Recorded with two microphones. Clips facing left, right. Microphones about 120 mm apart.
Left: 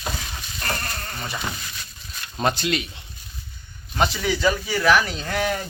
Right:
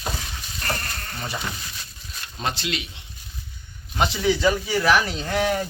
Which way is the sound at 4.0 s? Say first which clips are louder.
Right 1 dB; 25° right (ahead or behind).